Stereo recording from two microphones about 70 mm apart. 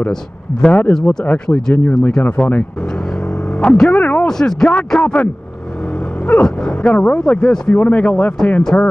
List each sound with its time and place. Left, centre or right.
0.1 s speech: centre
3.9 s radio: left
4.3 s speech: centre
6.4 s speech: centre